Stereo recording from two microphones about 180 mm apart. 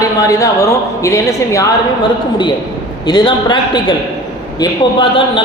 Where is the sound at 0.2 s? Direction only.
20° left (ahead or behind).